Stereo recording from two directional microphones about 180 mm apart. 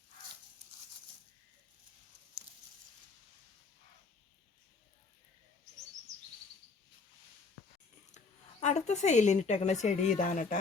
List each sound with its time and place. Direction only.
8.6 s a woman's voice: 40° left (ahead or behind)